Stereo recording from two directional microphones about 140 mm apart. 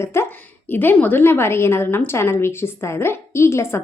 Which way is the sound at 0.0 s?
20° left (ahead or behind).